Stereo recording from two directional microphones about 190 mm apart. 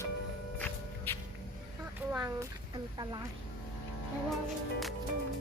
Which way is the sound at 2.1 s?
15° right (ahead or behind).